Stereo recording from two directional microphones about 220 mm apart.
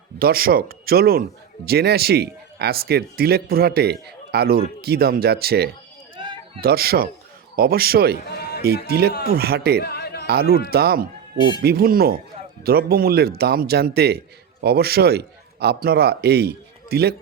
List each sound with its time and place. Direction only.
0.2 s speech: 45° right (ahead or behind)
6.1 s a sound: 20° right (ahead or behind)
6.6 s speech: 45° right (ahead or behind)
9.8 s music: 45° left (ahead or behind)
10.2 s a man's voice: 45° right (ahead or behind)